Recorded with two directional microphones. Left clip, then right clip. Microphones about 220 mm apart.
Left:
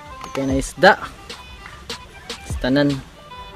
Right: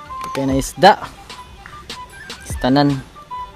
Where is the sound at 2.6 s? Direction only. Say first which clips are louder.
Right 3 dB; 30° right (ahead or behind).